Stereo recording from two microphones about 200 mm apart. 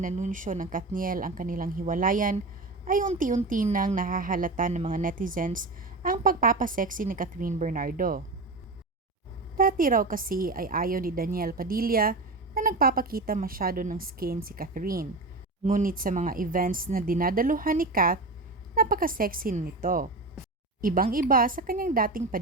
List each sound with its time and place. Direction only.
0.0 s a woman's voice: 40° right (ahead or behind)
9.6 s a woman's voice: 45° right (ahead or behind)